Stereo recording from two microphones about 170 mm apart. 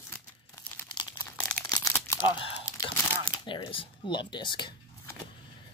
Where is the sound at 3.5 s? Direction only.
30° left (ahead or behind).